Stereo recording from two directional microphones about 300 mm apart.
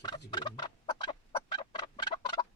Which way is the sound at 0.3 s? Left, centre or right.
Centre.